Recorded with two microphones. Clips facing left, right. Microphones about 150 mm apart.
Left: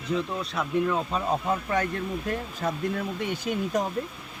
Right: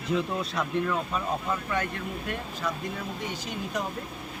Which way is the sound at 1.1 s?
40° left (ahead or behind).